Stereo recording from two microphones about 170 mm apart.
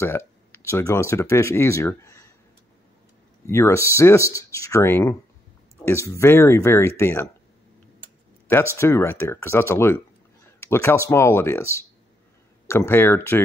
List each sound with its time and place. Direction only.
0.0 s speech: 15° left (ahead or behind)
3.4 s speech: 15° left (ahead or behind)
8.7 s speech: 15° left (ahead or behind)
12.6 s speech: 15° left (ahead or behind)